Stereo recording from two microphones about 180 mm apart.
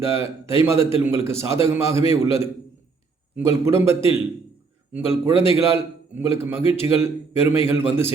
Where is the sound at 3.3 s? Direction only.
15° right (ahead or behind).